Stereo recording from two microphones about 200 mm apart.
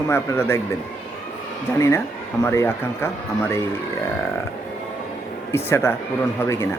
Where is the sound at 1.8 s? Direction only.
15° left (ahead or behind).